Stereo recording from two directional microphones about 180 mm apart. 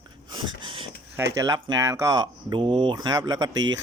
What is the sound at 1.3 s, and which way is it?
Speech, 20° right (ahead or behind).